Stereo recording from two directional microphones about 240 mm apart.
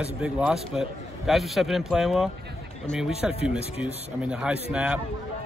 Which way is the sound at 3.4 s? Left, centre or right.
Left.